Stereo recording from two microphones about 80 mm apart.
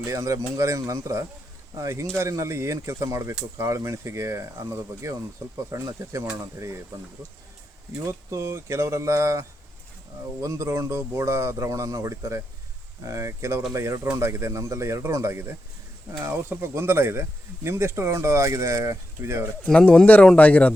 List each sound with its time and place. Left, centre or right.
0.0 s speech: right
19.6 s speech: centre